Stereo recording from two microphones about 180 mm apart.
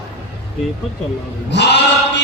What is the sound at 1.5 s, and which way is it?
Speech, 70° left (ahead or behind).